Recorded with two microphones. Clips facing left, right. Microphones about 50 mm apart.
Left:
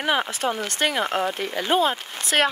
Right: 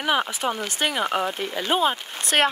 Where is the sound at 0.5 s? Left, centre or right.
Centre.